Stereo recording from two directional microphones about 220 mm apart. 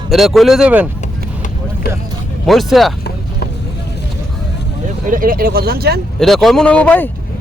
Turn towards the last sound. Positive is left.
turn(degrees=5)  # may be behind; listen again after turning